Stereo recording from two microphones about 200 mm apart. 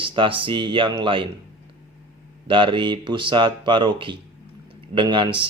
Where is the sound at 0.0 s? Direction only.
25° right (ahead or behind).